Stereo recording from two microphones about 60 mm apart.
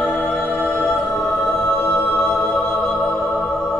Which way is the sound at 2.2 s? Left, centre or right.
Centre.